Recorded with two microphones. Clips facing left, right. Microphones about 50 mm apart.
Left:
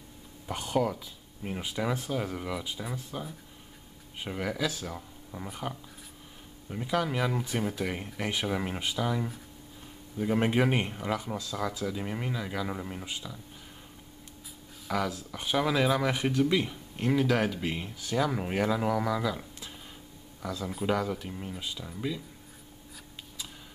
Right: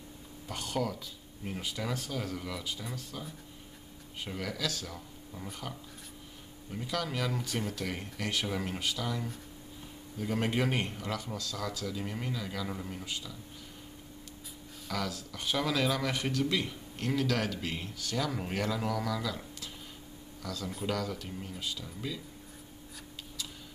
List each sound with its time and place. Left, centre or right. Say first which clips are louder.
0.5 s speech: left 5 dB; centre
14.9 s speech: left 5 dB; centre